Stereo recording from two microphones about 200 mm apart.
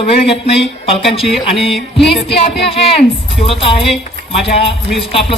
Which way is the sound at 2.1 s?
30° left (ahead or behind).